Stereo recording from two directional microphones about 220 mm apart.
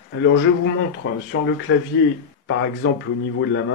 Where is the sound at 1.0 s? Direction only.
50° left (ahead or behind).